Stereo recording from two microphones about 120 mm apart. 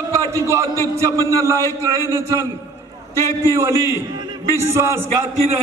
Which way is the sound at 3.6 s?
25° right (ahead or behind).